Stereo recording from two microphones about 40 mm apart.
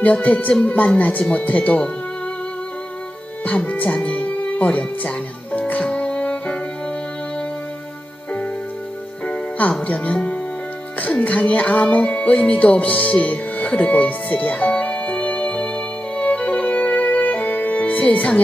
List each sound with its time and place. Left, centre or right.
0.0 s music: left
3.4 s music: left
4.6 s speech: left
5.9 s music: left
9.2 s music: left
9.8 s speech: left
11.0 s music: left